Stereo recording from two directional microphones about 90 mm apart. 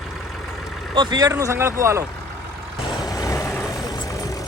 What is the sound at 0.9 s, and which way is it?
Speech, 55° right (ahead or behind).